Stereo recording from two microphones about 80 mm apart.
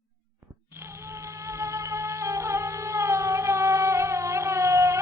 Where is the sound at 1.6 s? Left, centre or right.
Right.